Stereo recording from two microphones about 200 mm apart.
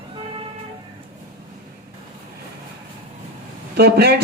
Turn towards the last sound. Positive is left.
turn(degrees=-50)  # may be behind; listen again after turning